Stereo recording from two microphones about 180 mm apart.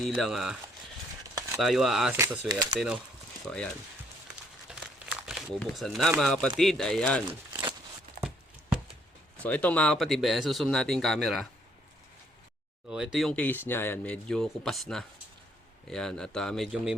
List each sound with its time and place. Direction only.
0.0 s speech: centre (ahead or behind)
1.5 s speech: centre (ahead or behind)
2.1 s speech: 15° right (ahead or behind)
2.7 s speech: 5° right (ahead or behind)
4.7 s crumpling: 5° right (ahead or behind)
5.2 s speech: centre (ahead or behind)
9.4 s speech: 10° left (ahead or behind)
12.9 s speech: 5° right (ahead or behind)